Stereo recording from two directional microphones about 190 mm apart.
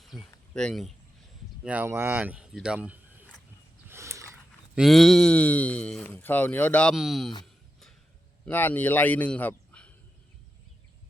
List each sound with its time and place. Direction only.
0.2 s speech: 5° left (ahead or behind)
1.6 s speech: 10° right (ahead or behind)
3.8 s a sound: 15° right (ahead or behind)
4.7 s speech: centre (ahead or behind)
8.4 s a man's voice: 10° left (ahead or behind)